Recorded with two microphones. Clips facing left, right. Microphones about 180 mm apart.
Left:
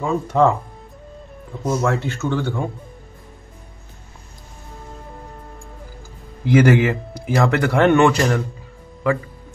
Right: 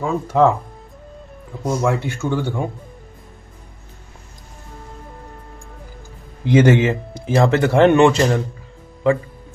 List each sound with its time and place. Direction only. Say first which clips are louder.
0.0 s speech: right 1 dB; 5° right (ahead or behind)
1.6 s speech: even; 5° left (ahead or behind)
1.9 s speech: right 1 dB; 15° right (ahead or behind)
6.4 s speech: right 1 dB; 20° right (ahead or behind)